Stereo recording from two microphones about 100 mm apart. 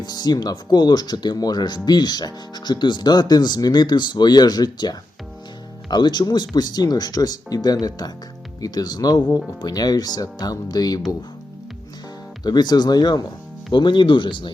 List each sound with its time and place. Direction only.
0.0 s speech: 45° left (ahead or behind)
12.4 s speech: 45° left (ahead or behind)